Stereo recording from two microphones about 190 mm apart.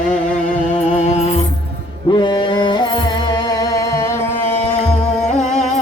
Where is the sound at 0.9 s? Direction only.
35° left (ahead or behind).